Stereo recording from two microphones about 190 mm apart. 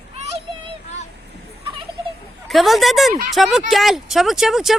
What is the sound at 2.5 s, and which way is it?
Speech, centre (ahead or behind).